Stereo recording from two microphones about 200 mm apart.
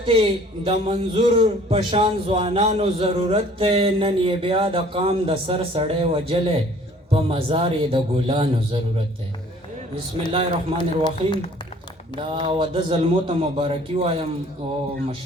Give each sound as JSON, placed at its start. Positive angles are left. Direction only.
{"t": 0.1, "sound": "a man's voice", "side_deg": -30}
{"t": 10.8, "sound": "speech", "side_deg": 25}
{"t": 12.1, "sound": "a man's voice", "side_deg": -25}